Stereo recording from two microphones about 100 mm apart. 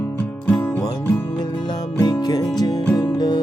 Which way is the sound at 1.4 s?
45° left (ahead or behind).